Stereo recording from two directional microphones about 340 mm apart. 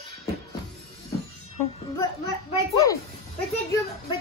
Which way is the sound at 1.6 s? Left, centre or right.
Centre.